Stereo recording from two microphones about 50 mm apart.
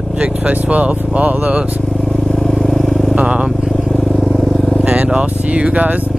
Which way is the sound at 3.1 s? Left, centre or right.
Right.